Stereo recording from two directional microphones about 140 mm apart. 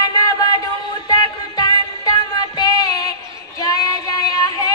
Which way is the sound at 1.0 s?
25° left (ahead or behind).